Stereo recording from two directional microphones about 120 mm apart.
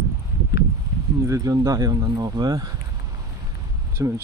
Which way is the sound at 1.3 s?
30° right (ahead or behind).